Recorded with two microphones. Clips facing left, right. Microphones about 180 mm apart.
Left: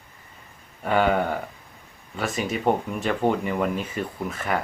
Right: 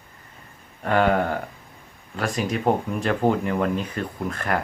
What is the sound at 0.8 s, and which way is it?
Speech, centre (ahead or behind).